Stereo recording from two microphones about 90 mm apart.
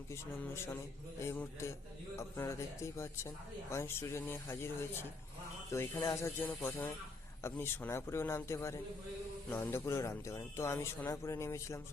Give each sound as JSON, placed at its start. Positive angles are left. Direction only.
{"t": 0.1, "sound": "speech", "side_deg": 30}
{"t": 2.1, "sound": "speech", "side_deg": 30}
{"t": 9.5, "sound": "speech", "side_deg": 25}